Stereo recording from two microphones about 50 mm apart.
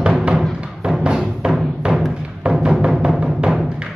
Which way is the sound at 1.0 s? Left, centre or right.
Centre.